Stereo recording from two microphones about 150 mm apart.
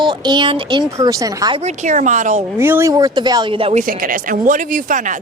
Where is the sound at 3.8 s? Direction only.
65° right (ahead or behind).